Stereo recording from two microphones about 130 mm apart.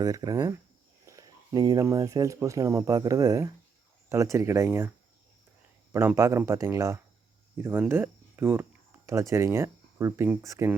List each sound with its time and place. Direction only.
0.0 s speech: 30° right (ahead or behind)
5.9 s speech: 20° right (ahead or behind)